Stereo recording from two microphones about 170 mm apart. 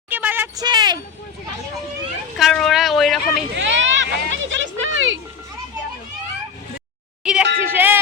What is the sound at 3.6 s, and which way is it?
Speech, 90° right.